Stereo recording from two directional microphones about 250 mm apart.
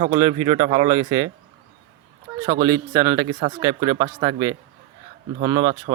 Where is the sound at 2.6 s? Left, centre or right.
Centre.